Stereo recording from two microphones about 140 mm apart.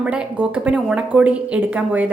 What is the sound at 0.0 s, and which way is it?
A woman's voice, 10° right (ahead or behind).